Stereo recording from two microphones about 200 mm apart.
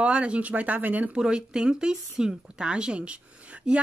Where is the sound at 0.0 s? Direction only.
5° right (ahead or behind).